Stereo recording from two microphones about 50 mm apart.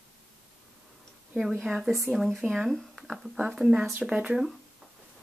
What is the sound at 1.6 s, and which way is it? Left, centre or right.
Speech, centre.